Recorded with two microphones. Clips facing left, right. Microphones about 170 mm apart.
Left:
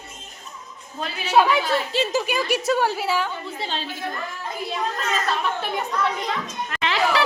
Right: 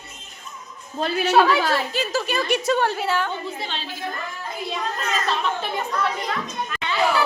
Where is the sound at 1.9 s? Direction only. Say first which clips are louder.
Left 2 dB; 25° left (ahead or behind).